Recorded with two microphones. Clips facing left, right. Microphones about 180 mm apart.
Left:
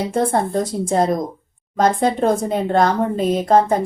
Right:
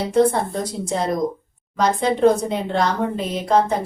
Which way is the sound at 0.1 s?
50° left (ahead or behind).